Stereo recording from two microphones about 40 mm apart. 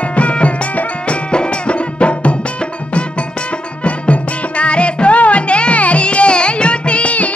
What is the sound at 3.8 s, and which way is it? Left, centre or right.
Music, left.